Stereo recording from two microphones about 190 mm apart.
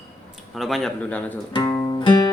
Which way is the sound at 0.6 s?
Centre (ahead or behind).